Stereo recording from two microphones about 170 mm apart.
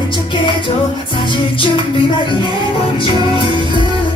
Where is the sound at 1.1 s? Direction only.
30° left (ahead or behind).